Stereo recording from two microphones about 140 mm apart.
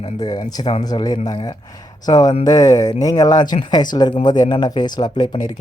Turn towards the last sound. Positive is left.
turn(degrees=30)  # may be behind; listen again after turning